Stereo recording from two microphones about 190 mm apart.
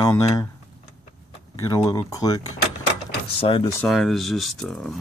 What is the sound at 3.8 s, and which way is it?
Speech, centre (ahead or behind).